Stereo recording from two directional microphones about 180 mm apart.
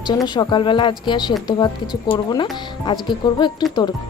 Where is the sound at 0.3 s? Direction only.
25° left (ahead or behind).